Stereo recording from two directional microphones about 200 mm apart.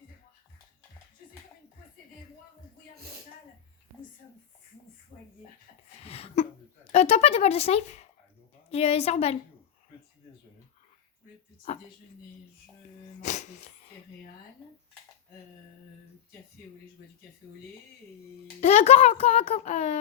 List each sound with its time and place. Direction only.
6.0 s a sound: 30° left (ahead or behind)
6.9 s speech: 30° left (ahead or behind)
13.2 s music: 35° left (ahead or behind)
18.6 s speech: 30° left (ahead or behind)